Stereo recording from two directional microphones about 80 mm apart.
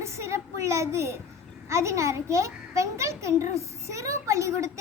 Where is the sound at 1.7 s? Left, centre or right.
Right.